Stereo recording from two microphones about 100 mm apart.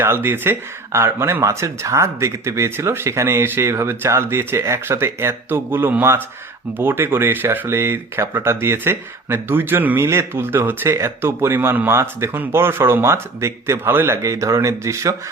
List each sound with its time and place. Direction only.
0.0 s speech: 25° right (ahead or behind)